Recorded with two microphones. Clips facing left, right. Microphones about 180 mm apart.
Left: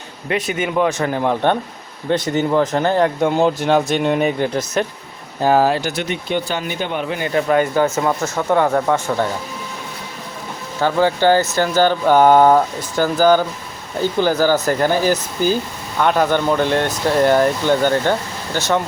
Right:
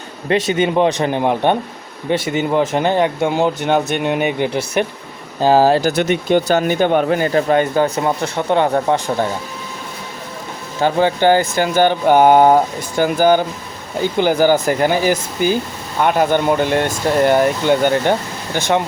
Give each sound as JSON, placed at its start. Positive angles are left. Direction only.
{"t": 0.3, "sound": "speech", "side_deg": -25}
{"t": 5.4, "sound": "speech", "side_deg": -30}
{"t": 6.0, "sound": "speech", "side_deg": -50}
{"t": 10.8, "sound": "speech", "side_deg": -20}